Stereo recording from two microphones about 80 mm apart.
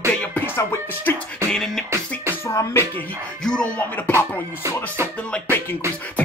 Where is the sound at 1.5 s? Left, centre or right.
Centre.